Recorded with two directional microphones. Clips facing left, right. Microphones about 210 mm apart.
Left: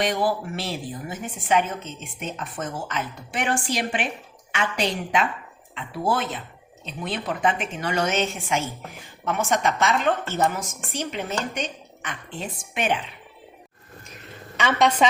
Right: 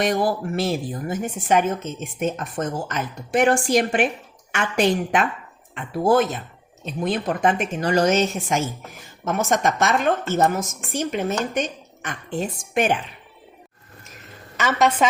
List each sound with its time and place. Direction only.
0.0 s a woman's voice: 45° right (ahead or behind)
14.5 s a woman's voice: 5° right (ahead or behind)